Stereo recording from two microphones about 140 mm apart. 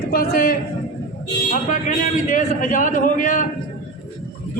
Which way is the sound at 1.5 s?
70° left (ahead or behind).